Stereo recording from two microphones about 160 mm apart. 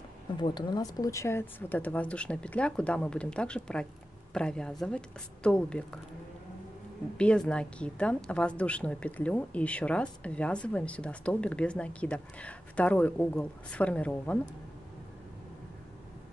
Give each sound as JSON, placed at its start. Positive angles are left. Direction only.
{"t": 0.4, "sound": "speech", "side_deg": 25}
{"t": 7.2, "sound": "speech", "side_deg": 5}